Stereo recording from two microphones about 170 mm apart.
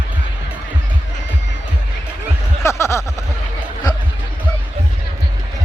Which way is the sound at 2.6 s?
15° left (ahead or behind).